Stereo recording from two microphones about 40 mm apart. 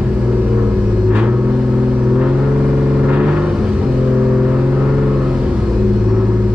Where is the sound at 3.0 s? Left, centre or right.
Right.